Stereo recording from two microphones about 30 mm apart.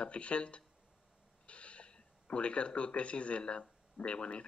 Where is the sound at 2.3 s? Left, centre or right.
Left.